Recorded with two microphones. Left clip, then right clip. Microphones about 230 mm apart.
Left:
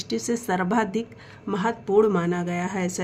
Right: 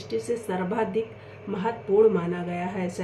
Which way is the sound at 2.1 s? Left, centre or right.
Left.